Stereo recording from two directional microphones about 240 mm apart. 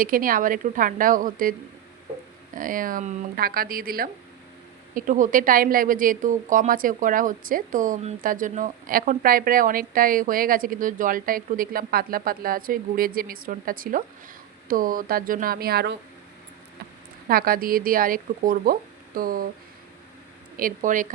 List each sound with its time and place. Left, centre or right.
0.0 s a woman's voice: right
2.6 s a woman's voice: right
17.2 s a woman's voice: right
20.6 s a woman's voice: right